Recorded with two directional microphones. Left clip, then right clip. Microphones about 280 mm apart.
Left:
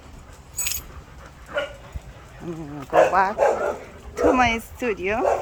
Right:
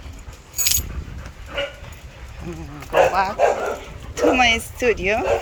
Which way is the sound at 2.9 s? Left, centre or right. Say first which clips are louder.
Even; centre.